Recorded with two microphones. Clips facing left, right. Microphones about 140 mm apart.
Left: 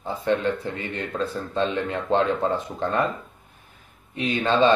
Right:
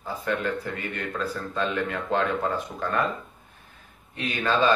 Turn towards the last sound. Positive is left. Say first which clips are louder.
# left 4 dB
turn(degrees=25)  # may be behind; listen again after turning